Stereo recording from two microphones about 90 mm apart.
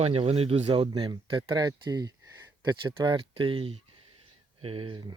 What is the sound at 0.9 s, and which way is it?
Speech, 55° right (ahead or behind).